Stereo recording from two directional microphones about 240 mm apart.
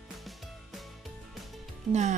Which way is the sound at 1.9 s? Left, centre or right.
Right.